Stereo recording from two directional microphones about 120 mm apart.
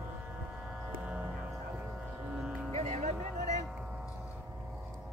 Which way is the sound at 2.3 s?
10° right (ahead or behind).